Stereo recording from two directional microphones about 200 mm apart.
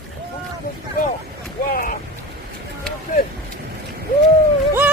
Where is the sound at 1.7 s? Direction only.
45° left (ahead or behind).